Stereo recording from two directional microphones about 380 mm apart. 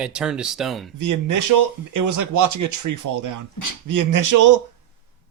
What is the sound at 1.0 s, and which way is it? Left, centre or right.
Speech, right.